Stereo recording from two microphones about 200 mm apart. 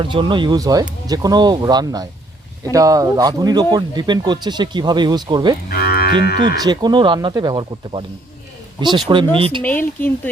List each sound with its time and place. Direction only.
0.0 s speech: 25° right (ahead or behind)
5.6 s moo: 50° left (ahead or behind)
6.6 s speech: 20° right (ahead or behind)
9.0 s speech: 25° right (ahead or behind)
9.6 s speech: 10° left (ahead or behind)